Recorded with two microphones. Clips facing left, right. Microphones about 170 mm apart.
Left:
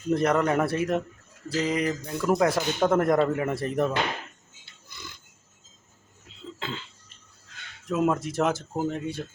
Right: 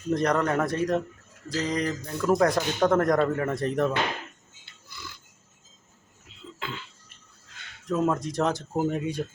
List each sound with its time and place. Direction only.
0.1 s speech: 5° left (ahead or behind)
4.9 s pig: 20° left (ahead or behind)
6.6 s cough: 25° left (ahead or behind)
7.9 s speech: 5° left (ahead or behind)
8.7 s speech: 10° right (ahead or behind)